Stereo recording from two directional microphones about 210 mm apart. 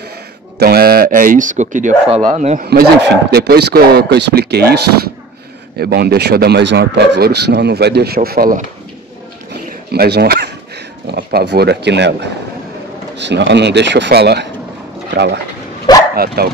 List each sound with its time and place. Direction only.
0.6 s speech: 45° right (ahead or behind); by 2.6 s 30° right (ahead or behind)
2.6 s speech: 50° right (ahead or behind)
9.5 s a sound: 50° right (ahead or behind)
11.1 s a man's voice: 55° right (ahead or behind)
15.9 s dog: 20° left (ahead or behind)
16.4 s speech: 45° right (ahead or behind)